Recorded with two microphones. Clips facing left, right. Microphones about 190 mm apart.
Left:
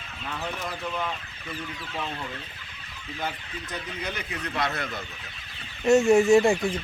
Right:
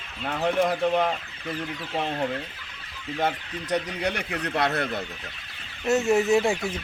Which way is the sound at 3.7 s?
80° right.